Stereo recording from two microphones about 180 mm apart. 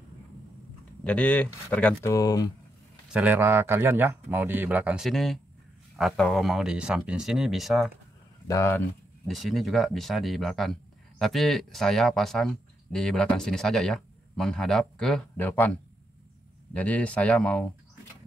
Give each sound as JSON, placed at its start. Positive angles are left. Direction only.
{"t": 1.0, "sound": "speech", "side_deg": 5}
{"t": 2.1, "sound": "speech", "side_deg": 20}
{"t": 3.1, "sound": "speech", "side_deg": -10}
{"t": 8.5, "sound": "speech", "side_deg": 15}
{"t": 9.3, "sound": "speech", "side_deg": 0}